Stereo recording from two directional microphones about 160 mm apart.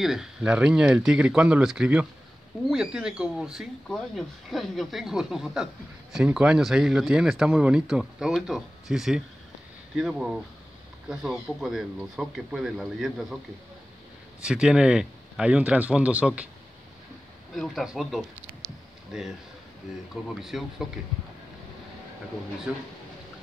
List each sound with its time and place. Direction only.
0.0 s speech: 5° right (ahead or behind)
14.4 s speech: 5° right (ahead or behind)
17.6 s speech: centre (ahead or behind)
20.3 s speech: centre (ahead or behind)
22.7 s speech: 10° right (ahead or behind)